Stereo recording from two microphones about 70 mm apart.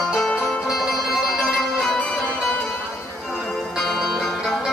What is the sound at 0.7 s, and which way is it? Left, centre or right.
Music, centre.